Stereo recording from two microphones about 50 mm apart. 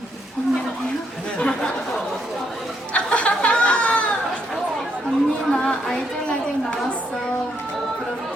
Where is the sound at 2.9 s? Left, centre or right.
Left.